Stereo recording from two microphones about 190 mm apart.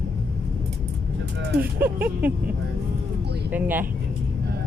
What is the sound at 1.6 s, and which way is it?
Speech, 10° right (ahead or behind).